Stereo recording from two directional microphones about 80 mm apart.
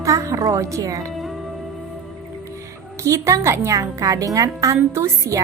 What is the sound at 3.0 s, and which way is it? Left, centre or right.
A woman's voice, right.